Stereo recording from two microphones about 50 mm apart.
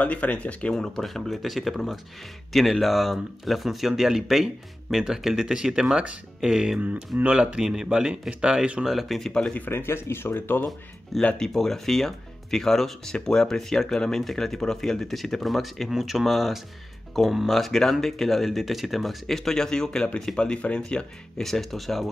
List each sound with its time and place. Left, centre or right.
0.0 s speech: left
0.7 s speech: centre; by 7.6 s right
7.6 s speech: centre
8.8 s speech: centre
9.3 s speech: centre
9.7 s speech: left
11.1 s speech: centre
21.4 s speech: centre